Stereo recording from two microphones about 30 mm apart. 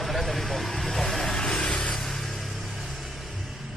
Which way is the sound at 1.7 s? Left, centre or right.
Left.